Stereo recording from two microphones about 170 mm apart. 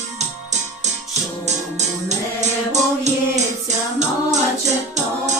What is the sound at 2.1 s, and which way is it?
Music, 40° right (ahead or behind).